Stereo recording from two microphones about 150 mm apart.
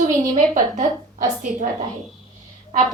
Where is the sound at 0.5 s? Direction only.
60° right (ahead or behind).